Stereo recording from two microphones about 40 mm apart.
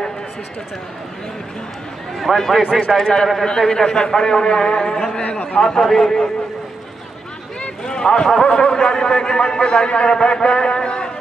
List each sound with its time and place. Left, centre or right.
2.1 s a man's voice: centre
5.2 s a man's voice: left
5.5 s a man's voice: centre
7.8 s a sound: centre
8.5 s a man's voice: left